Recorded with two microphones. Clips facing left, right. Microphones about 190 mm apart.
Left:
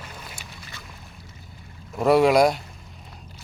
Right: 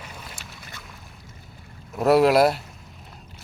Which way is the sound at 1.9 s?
Centre (ahead or behind).